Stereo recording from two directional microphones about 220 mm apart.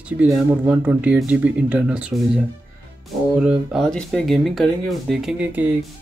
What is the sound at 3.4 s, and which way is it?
Speech, 5° right (ahead or behind).